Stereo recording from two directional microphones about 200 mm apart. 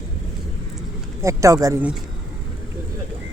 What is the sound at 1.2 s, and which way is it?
Speech, 15° right (ahead or behind).